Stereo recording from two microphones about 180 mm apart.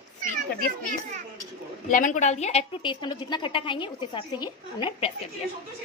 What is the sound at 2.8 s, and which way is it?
A woman's voice, 25° left (ahead or behind).